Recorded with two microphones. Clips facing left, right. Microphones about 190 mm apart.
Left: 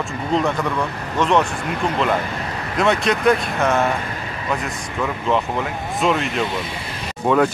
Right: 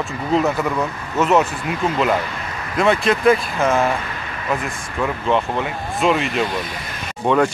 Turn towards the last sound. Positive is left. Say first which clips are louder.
# even
turn(degrees=5)  # may be behind; listen again after turning